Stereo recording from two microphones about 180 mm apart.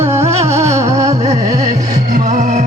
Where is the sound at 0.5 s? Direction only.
40° right (ahead or behind).